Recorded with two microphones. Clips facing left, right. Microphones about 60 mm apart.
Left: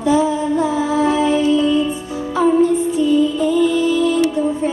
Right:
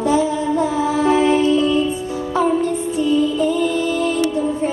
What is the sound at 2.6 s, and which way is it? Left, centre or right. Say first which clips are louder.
Music: left 3 dB; right.